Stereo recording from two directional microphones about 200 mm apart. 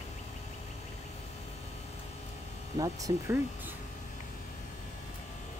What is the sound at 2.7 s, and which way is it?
Speech, 15° right (ahead or behind).